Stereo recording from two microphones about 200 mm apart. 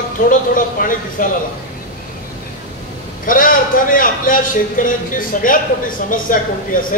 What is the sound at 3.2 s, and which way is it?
A man's voice, 45° left (ahead or behind).